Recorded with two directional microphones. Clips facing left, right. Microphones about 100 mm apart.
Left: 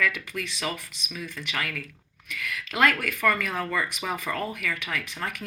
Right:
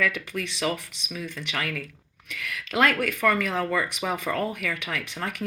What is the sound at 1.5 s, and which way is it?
Speech, 30° right (ahead or behind).